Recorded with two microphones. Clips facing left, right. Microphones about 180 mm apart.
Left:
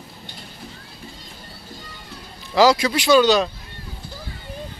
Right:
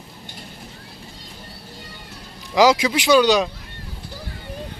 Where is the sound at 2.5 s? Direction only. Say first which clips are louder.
Even; 15° right (ahead or behind).